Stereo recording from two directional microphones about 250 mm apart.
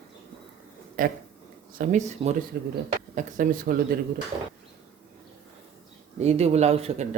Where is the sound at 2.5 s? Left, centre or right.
Right.